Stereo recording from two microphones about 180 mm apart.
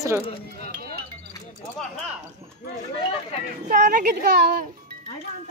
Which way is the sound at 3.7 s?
50° right (ahead or behind).